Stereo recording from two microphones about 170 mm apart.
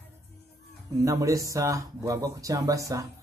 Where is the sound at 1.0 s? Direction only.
20° right (ahead or behind).